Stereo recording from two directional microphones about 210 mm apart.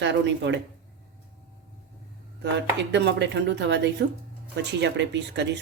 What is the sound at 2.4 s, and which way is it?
Speech, 55° right (ahead or behind).